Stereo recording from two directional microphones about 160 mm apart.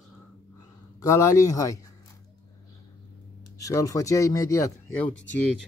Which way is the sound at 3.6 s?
20° left (ahead or behind).